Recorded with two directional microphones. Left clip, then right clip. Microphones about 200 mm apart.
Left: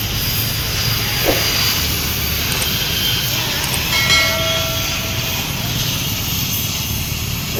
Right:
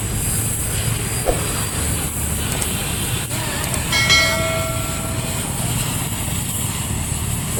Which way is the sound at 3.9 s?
Centre (ahead or behind).